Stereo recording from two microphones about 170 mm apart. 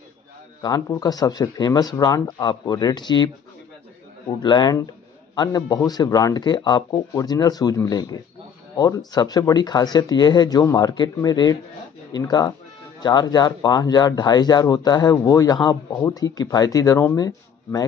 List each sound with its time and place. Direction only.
0.6 s speech: 20° left (ahead or behind)
4.4 s speech: 25° left (ahead or behind)